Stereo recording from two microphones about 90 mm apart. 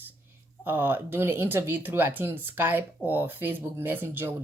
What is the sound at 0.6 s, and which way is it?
A woman's voice, 25° right (ahead or behind).